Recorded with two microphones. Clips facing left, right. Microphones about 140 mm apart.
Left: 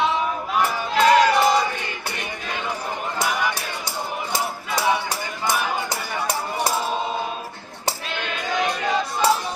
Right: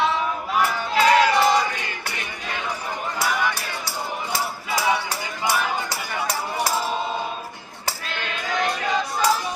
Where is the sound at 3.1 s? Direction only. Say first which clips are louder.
Even; 20° left (ahead or behind).